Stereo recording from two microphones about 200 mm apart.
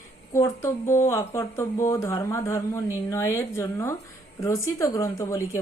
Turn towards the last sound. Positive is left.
turn(degrees=15)  # may be behind; listen again after turning